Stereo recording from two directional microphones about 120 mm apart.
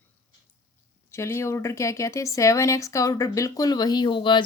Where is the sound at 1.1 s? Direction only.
25° left (ahead or behind).